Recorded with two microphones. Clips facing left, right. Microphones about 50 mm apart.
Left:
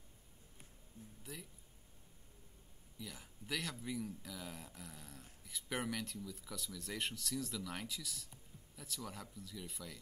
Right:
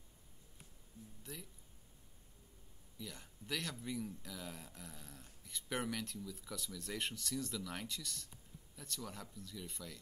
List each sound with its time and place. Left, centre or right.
1.2 s speech: centre
3.0 s speech: centre